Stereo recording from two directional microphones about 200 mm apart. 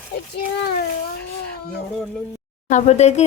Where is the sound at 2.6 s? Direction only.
35° left (ahead or behind).